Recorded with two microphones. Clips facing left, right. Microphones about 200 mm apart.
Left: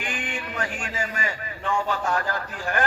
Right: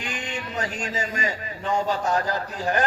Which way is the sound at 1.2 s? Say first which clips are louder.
Right 2 dB; 40° right (ahead or behind).